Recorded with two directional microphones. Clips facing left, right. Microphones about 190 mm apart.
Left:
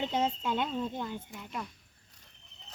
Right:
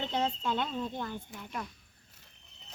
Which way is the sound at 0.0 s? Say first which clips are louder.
Left 1 dB; 15° left (ahead or behind).